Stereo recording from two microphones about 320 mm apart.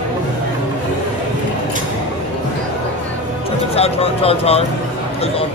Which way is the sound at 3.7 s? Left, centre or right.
Centre.